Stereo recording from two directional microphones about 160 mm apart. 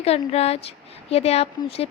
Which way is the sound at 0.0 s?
40° left (ahead or behind).